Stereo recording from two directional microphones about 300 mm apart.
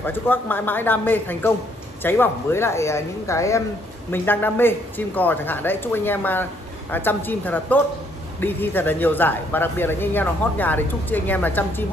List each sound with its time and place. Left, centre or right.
0.0 s speech: centre